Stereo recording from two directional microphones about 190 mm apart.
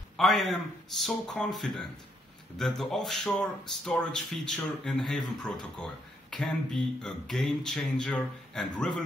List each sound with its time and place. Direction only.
0.2 s speech: centre (ahead or behind)